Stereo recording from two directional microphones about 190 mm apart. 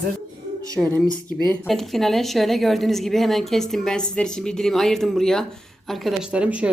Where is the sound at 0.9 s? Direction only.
5° left (ahead or behind).